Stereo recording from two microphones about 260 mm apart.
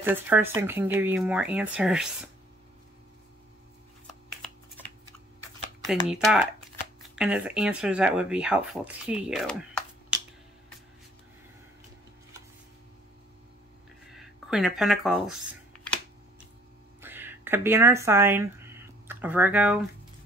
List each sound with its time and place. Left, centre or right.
0.0 s speech: centre
5.9 s speech: centre
14.1 s speech: centre
17.0 s speech: centre